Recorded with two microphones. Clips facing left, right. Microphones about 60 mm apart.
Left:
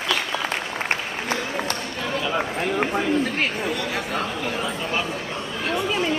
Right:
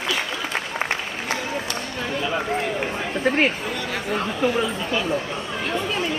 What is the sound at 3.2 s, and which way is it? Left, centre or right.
Speech, right.